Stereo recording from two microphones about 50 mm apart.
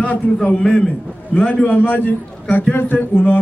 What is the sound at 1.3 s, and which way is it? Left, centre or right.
Speech, left.